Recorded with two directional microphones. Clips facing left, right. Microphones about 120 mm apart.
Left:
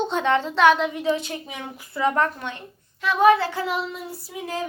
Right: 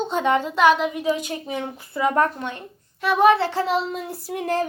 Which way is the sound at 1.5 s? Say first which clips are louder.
Right 7 dB; 30° right (ahead or behind).